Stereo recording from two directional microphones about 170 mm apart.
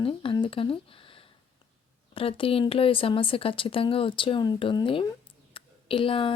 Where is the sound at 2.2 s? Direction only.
35° left (ahead or behind).